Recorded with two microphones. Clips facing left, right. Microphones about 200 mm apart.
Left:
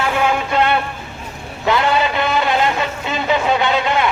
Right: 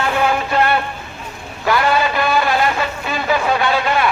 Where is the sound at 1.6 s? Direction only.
20° left (ahead or behind).